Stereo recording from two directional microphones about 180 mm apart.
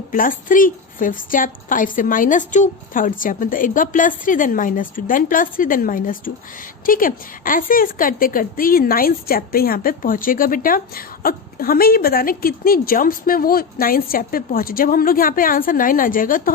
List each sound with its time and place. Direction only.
0.1 s a woman's voice: 50° left (ahead or behind)